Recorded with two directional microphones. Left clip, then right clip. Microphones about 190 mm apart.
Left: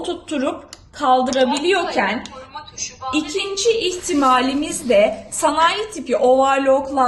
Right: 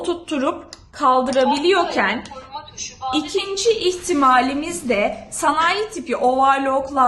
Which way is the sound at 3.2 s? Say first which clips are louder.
Left 1 dB; 35° right (ahead or behind).